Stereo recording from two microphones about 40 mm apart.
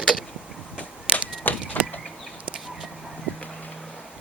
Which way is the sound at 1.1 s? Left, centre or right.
Left.